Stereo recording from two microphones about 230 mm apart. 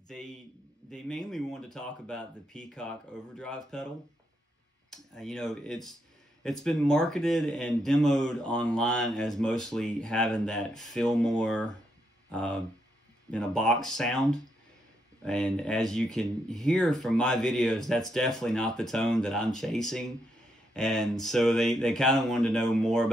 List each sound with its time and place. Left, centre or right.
0.1 s speech: centre
4.9 s speech: centre
15.2 s speech: centre